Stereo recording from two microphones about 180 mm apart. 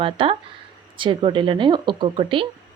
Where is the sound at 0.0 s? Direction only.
30° right (ahead or behind).